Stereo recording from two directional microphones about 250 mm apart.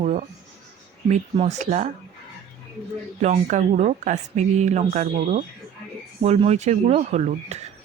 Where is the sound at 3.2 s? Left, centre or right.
Right.